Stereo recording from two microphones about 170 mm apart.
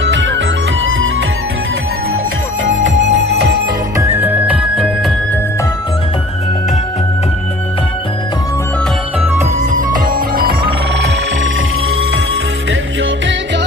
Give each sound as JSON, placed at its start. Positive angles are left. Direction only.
{"t": 0.0, "sound": "music", "side_deg": -90}
{"t": 2.6, "sound": "music", "side_deg": -90}
{"t": 3.9, "sound": "music", "side_deg": -15}
{"t": 9.7, "sound": "music", "side_deg": -55}